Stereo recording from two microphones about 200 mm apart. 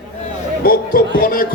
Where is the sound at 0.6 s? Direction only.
45° left (ahead or behind).